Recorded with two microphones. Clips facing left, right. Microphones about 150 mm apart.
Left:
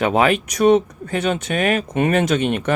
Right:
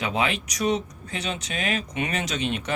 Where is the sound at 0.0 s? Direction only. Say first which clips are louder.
Left 9 dB; 55° left (ahead or behind).